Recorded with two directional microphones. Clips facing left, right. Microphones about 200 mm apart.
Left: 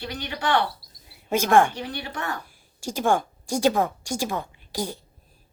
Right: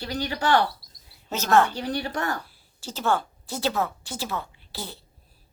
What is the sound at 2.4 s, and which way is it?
A woman's voice, 15° left (ahead or behind).